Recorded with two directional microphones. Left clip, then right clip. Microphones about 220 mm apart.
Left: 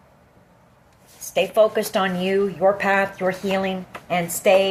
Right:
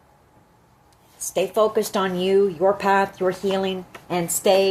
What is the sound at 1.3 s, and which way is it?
Speech, 40° right (ahead or behind).